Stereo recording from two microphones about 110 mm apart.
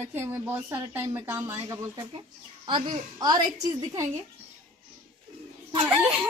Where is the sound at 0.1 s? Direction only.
20° right (ahead or behind).